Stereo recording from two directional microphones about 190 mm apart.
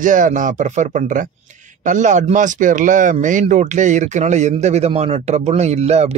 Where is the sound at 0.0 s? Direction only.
45° right (ahead or behind).